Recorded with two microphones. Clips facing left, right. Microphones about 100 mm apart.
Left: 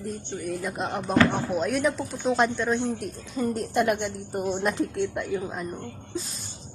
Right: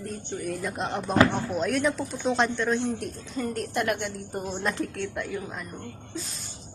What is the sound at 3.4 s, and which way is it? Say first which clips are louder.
A woman's voice: left 4 dB; 20° left (ahead or behind).